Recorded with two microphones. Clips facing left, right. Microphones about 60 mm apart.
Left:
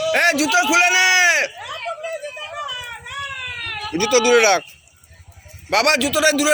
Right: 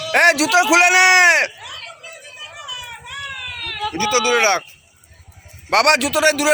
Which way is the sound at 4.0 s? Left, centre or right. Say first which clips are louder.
Left 3 dB; right.